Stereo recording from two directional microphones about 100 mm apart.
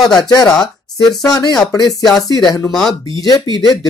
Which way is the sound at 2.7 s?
Centre (ahead or behind).